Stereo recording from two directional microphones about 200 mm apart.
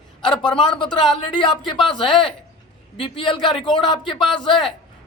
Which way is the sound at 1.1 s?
25° left (ahead or behind).